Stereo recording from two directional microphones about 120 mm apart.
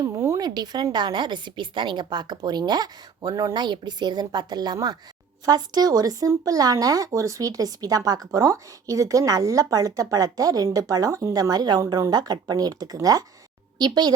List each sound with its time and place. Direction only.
0.0 s speech: 25° right (ahead or behind)